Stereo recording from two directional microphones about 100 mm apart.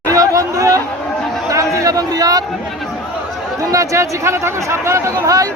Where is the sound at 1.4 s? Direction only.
30° right (ahead or behind).